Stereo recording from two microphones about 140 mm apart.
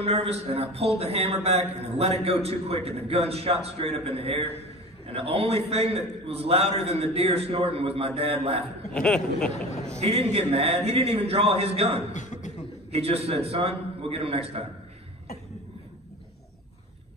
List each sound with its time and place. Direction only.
0.0 s speech: 50° right (ahead or behind)
8.9 s speech: 5° left (ahead or behind)
10.0 s speech: 45° right (ahead or behind)
12.1 s chuckle: 60° left (ahead or behind)
12.9 s speech: 45° right (ahead or behind)